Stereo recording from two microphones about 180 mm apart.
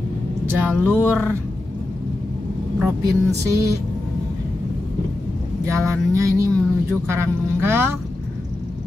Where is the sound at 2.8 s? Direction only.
15° right (ahead or behind).